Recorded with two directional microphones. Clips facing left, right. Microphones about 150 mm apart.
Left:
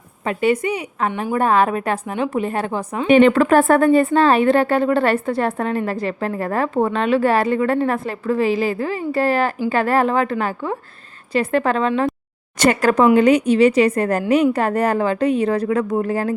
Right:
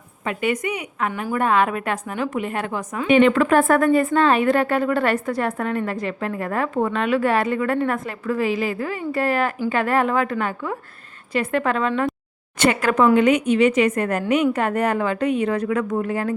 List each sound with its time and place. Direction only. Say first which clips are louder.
0.3 s a woman's voice: left 5 dB; 30° left (ahead or behind)